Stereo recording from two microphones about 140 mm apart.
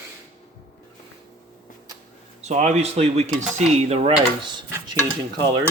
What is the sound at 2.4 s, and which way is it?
Speech, 55° right (ahead or behind).